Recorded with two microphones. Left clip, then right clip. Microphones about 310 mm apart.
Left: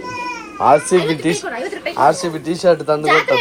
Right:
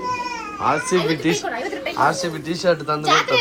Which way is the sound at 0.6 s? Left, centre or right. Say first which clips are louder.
Left 7 dB; centre.